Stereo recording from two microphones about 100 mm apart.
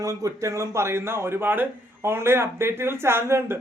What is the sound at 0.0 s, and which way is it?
Speech, 35° right (ahead or behind).